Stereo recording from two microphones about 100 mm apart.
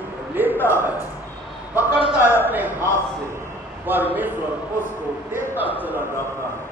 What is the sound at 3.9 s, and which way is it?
Speech, 20° right (ahead or behind).